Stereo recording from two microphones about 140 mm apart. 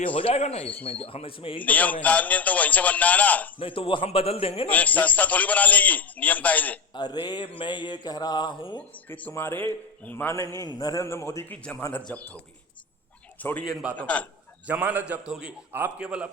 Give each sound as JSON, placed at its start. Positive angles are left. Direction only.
{"t": 0.2, "sound": "speech", "side_deg": 45}
{"t": 1.6, "sound": "a man's voice", "side_deg": 10}
{"t": 3.6, "sound": "speech", "side_deg": 40}
{"t": 4.7, "sound": "a man's voice", "side_deg": 10}
{"t": 6.9, "sound": "speech", "side_deg": 30}
{"t": 8.8, "sound": "a man's voice", "side_deg": 10}
{"t": 10.7, "sound": "a man's voice", "side_deg": 25}
{"t": 13.4, "sound": "a man's voice", "side_deg": 10}
{"t": 14.7, "sound": "a man's voice", "side_deg": -10}